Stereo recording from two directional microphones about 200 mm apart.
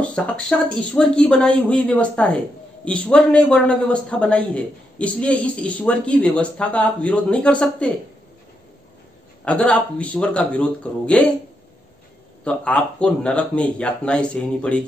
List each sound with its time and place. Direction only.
0.0 s a man's voice: 5° left (ahead or behind)
9.4 s a man's voice: 5° left (ahead or behind)
12.4 s a man's voice: 5° left (ahead or behind)